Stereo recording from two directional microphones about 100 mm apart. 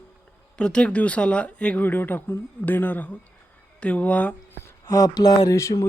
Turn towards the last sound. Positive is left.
turn(degrees=30)  # may be behind; listen again after turning